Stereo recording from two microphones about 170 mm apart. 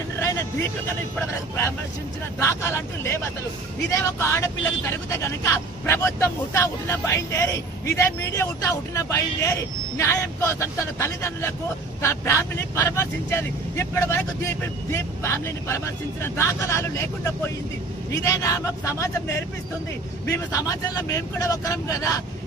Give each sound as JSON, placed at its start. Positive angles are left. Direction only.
{"t": 0.2, "sound": "vehicle", "side_deg": 15}
{"t": 2.3, "sound": "speech", "side_deg": 15}